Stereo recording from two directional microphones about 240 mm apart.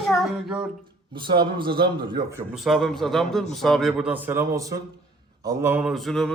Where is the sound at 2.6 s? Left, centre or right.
Centre.